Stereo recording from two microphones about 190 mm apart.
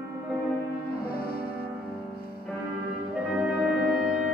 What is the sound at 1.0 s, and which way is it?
Music, 55° left (ahead or behind).